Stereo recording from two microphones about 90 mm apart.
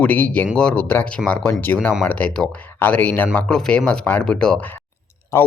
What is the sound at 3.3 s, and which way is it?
Speech, 10° left (ahead or behind).